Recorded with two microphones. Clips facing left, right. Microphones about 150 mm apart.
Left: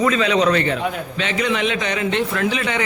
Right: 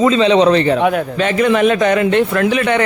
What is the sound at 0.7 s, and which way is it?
Speech, 65° right (ahead or behind).